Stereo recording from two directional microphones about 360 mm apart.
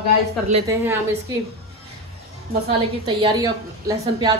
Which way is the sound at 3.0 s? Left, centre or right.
Centre.